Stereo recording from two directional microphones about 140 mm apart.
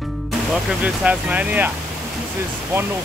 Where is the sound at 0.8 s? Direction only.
10° right (ahead or behind).